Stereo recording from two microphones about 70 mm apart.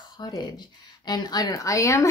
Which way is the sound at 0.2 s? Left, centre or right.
Left.